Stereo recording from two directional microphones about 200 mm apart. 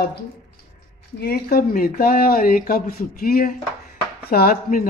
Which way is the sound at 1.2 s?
50° left (ahead or behind).